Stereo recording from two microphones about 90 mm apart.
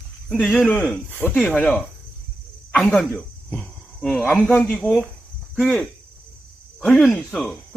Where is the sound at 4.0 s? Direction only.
5° left (ahead or behind).